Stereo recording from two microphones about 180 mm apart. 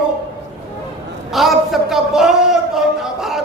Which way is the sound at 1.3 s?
Centre (ahead or behind).